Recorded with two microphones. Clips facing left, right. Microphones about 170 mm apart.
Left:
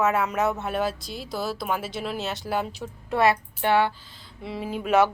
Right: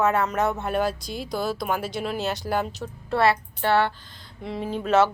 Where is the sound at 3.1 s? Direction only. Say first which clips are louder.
Even; 15° left (ahead or behind).